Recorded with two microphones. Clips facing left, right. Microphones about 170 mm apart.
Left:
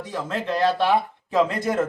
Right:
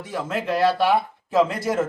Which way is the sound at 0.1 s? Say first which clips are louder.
Right 2 dB; 5° right (ahead or behind).